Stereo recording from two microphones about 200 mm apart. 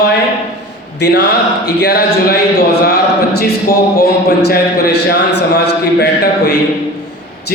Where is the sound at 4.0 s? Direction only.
50° left (ahead or behind).